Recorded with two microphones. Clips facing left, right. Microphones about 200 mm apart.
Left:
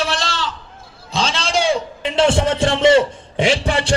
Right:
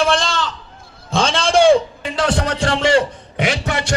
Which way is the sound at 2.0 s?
25° left (ahead or behind).